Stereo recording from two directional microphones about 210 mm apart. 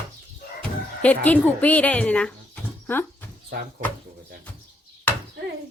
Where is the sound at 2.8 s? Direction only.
10° left (ahead or behind).